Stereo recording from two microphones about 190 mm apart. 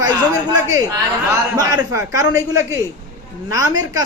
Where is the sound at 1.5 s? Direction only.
20° right (ahead or behind).